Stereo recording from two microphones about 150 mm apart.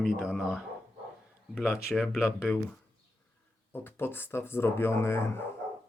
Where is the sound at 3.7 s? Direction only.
15° left (ahead or behind).